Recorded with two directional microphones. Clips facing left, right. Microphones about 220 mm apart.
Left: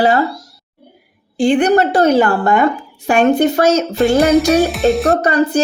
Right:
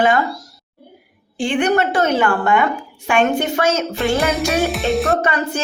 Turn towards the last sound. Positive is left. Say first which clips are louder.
# left 6 dB
turn(degrees=35)  # may be behind; listen again after turning